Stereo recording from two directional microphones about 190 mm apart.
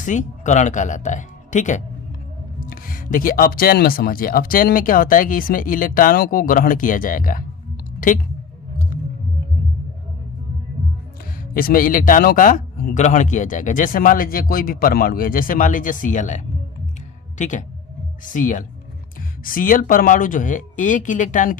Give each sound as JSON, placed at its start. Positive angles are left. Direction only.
{"t": 0.0, "sound": "speech", "side_deg": 40}
{"t": 11.5, "sound": "speech", "side_deg": 50}